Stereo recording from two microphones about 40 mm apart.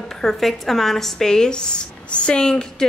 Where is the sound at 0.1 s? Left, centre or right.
Centre.